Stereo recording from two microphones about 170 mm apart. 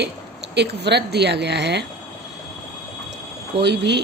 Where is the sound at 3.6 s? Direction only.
90° right.